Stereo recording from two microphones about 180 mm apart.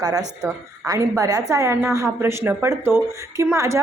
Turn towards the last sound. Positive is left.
turn(degrees=-15)  # may be behind; listen again after turning